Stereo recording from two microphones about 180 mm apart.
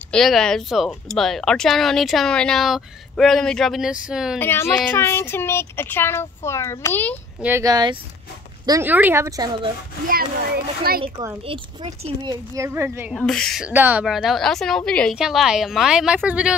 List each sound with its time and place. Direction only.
0.1 s speech: centre (ahead or behind)
4.4 s speech: 10° left (ahead or behind)
7.3 s speech: 10° right (ahead or behind)
7.6 s speech: 25° right (ahead or behind)
10.0 s a child's voice: 55° right (ahead or behind)
11.4 s speech: 30° right (ahead or behind); by 13.1 s 15° right (ahead or behind)
13.1 s speech: 5° left (ahead or behind)